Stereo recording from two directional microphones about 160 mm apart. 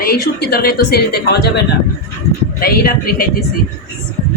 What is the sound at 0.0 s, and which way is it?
A woman's voice, 70° left (ahead or behind).